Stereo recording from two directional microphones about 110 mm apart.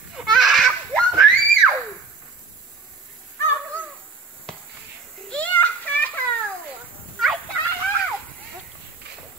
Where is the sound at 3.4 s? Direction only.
20° left (ahead or behind).